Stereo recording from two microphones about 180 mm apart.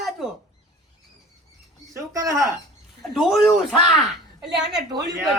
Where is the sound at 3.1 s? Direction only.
Centre (ahead or behind).